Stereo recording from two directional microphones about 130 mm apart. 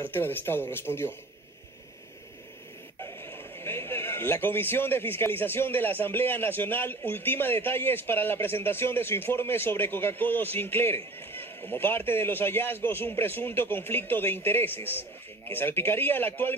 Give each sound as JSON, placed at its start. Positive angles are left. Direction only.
{"t": 0.0, "sound": "speech", "side_deg": 15}
{"t": 3.0, "sound": "speech", "side_deg": 20}